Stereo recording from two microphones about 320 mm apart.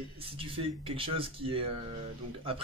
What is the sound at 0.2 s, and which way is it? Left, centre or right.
Speech, centre.